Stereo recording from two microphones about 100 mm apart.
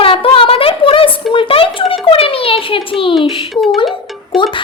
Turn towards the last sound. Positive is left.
turn(degrees=0)  # may be behind; listen again after turning